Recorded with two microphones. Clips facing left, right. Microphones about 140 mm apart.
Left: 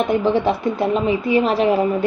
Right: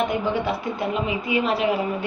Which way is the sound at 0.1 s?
40° left (ahead or behind).